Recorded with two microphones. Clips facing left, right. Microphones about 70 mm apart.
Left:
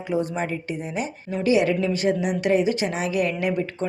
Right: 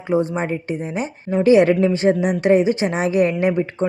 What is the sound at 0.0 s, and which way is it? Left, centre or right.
A woman's voice, right.